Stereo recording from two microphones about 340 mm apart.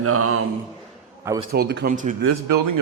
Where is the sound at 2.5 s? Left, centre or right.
Right.